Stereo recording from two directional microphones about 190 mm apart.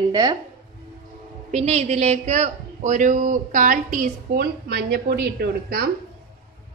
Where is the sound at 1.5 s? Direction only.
35° right (ahead or behind); by 5.9 s 55° right (ahead or behind).